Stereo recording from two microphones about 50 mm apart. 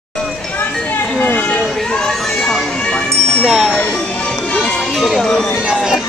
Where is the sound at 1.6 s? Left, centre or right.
Centre.